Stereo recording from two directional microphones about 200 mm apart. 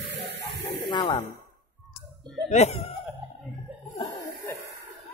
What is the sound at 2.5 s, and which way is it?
Speech, 35° left (ahead or behind).